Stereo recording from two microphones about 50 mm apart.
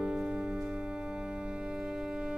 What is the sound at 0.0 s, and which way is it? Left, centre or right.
Music, centre.